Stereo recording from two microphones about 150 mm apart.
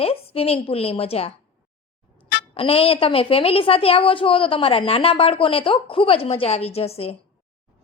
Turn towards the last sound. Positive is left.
turn(degrees=40)  # may be behind; listen again after turning